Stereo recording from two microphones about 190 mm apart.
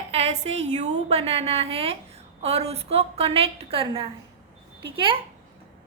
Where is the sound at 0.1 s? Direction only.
35° right (ahead or behind).